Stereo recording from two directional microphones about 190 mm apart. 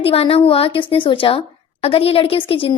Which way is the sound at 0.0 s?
30° left (ahead or behind).